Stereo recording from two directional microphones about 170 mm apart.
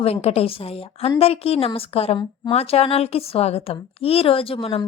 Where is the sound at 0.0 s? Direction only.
35° left (ahead or behind).